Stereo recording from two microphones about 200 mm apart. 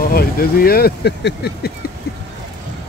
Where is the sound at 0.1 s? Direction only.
50° left (ahead or behind).